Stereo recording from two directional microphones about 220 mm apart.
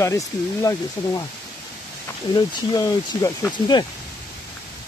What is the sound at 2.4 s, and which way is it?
Speech, 15° left (ahead or behind).